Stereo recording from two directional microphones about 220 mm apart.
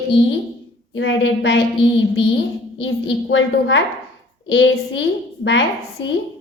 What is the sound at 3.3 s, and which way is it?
A woman's voice, 55° left (ahead or behind).